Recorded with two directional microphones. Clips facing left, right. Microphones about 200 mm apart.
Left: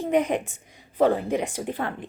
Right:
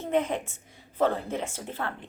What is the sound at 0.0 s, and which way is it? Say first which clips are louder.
A woman's voice: left 4 dB; 15° left (ahead or behind).